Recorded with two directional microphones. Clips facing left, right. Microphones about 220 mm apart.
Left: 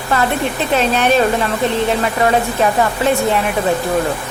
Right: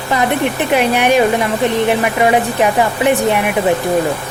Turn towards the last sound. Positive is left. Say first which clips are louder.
# right 2 dB
turn(degrees=-15)  # may be behind; listen again after turning